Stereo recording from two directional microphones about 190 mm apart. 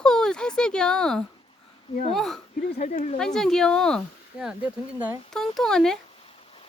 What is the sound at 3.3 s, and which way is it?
Speech, 5° left (ahead or behind).